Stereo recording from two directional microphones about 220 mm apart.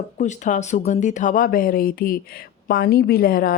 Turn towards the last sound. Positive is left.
turn(degrees=40)  # may be behind; listen again after turning